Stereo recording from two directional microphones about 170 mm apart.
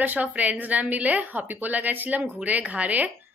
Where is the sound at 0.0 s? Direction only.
10° right (ahead or behind).